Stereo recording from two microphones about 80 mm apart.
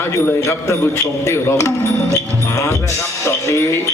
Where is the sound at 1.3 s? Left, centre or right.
Left.